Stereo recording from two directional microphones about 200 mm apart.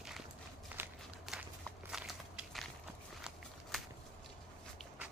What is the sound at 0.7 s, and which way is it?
Walk, 10° right (ahead or behind).